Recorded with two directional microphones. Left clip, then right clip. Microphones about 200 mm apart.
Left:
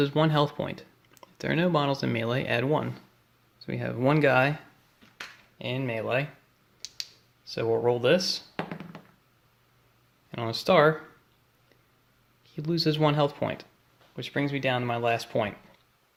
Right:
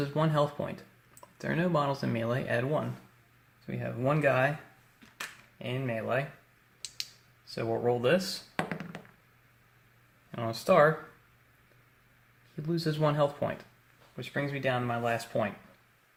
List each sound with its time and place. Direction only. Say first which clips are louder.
0.0 s speech: left 4 dB; 35° left (ahead or behind)
3.7 s speech: left 5 dB; 45° left (ahead or behind)
5.5 s speech: left 4 dB; 50° left (ahead or behind)
6.8 s typing: left 1 dB; 25° left (ahead or behind)
7.5 s speech: left 4 dB; 50° left (ahead or behind)
8.5 s music: right 1 dB; 10° right (ahead or behind)
10.3 s speech: left 2 dB; 40° left (ahead or behind)
12.6 s speech: left 5 dB; 30° left (ahead or behind)
14.2 s speech: left 4 dB; 50° left (ahead or behind)